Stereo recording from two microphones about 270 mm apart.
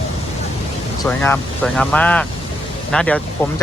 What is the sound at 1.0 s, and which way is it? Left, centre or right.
Speech, centre.